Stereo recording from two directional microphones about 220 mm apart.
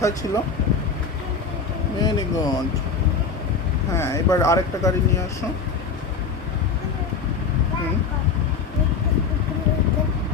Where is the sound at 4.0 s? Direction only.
15° left (ahead or behind).